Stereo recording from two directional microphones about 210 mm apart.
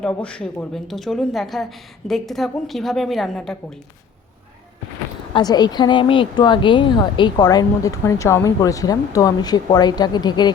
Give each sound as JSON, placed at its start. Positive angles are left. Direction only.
{"t": 0.0, "sound": "a woman's voice", "side_deg": 5}
{"t": 5.3, "sound": "speech", "side_deg": 20}